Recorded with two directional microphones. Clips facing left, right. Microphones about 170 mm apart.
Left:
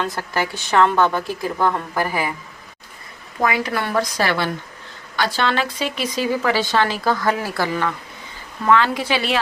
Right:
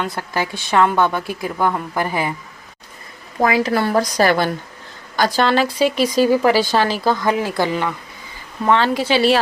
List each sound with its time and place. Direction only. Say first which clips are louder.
0.0 s a woman's voice: even; 10° right (ahead or behind)
3.4 s a woman's voice: right 4 dB; 30° right (ahead or behind)
8.6 s a woman's voice: right 1 dB; 30° right (ahead or behind)